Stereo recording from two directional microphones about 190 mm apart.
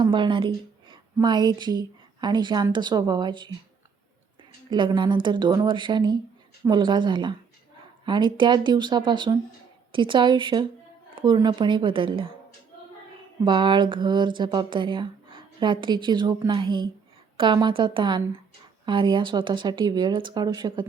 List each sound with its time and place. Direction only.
0.0 s a woman's voice: 25° right (ahead or behind)
4.7 s speech: 25° right (ahead or behind)
13.4 s speech: 25° right (ahead or behind)